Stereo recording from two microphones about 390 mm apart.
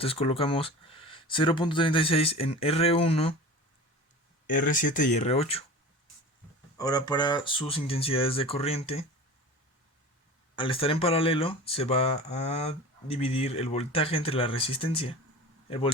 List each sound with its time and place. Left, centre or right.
0.0 s speech: centre
4.5 s speech: left
6.7 s speech: centre
10.5 s speech: centre